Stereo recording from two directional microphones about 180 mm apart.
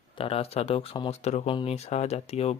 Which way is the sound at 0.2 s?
35° left (ahead or behind).